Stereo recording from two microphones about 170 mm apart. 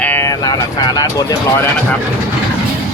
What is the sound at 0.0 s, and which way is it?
Speech, 15° left (ahead or behind).